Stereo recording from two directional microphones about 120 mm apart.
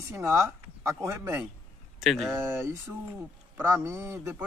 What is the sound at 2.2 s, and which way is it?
A man's voice, 20° right (ahead or behind).